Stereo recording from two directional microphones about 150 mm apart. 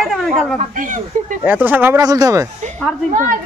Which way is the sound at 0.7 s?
60° right (ahead or behind).